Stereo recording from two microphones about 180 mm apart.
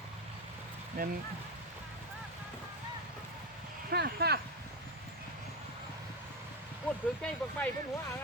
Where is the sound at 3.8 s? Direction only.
60° right (ahead or behind).